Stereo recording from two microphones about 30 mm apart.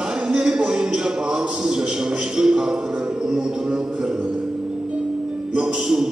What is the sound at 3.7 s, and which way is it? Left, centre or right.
Music, right.